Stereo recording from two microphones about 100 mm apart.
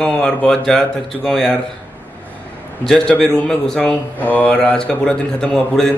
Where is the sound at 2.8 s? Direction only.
5° left (ahead or behind).